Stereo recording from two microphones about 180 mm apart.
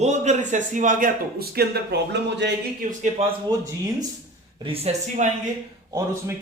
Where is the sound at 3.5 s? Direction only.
20° right (ahead or behind).